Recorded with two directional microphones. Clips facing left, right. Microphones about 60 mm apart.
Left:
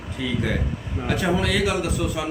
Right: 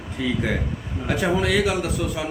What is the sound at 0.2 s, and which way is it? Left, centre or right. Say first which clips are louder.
A man's voice: right 1 dB; centre.